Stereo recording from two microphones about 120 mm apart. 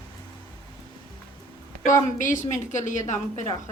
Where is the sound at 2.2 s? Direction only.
90° left.